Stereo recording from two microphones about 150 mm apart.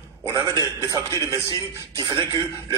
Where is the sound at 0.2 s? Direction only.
20° right (ahead or behind).